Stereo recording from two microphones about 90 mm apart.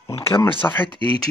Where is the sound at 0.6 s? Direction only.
20° left (ahead or behind).